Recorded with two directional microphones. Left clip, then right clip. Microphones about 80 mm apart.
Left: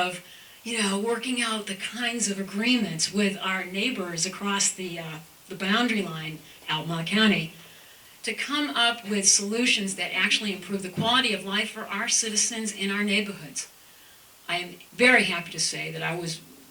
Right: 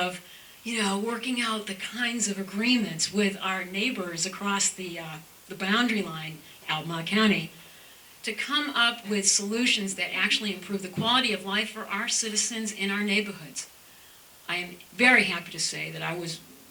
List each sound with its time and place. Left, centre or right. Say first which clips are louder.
0.6 s speech: left 1 dB; centre
14.4 s speech: left 2 dB; right